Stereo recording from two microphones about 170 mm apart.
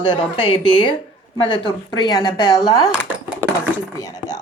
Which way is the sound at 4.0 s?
20° left (ahead or behind).